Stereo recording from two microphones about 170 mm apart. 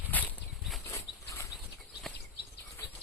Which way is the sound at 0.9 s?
15° left (ahead or behind).